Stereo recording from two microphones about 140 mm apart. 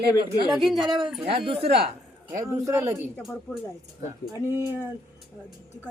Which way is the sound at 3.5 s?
25° left (ahead or behind).